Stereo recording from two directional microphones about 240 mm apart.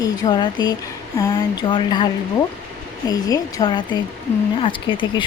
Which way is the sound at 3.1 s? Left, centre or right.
Centre.